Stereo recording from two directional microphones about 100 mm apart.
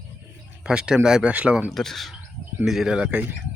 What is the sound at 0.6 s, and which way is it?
Speech, 10° right (ahead or behind).